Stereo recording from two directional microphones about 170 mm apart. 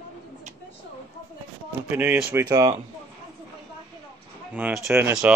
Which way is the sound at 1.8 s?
10° right (ahead or behind).